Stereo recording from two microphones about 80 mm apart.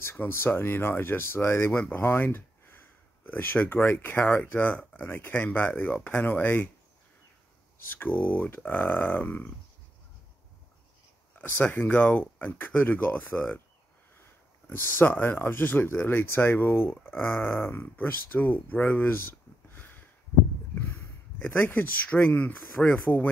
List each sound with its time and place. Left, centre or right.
0.0 s speech: left
7.8 s speech: left
11.4 s speech: left
14.7 s speech: left